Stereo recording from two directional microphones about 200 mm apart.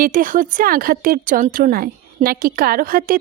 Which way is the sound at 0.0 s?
40° right (ahead or behind).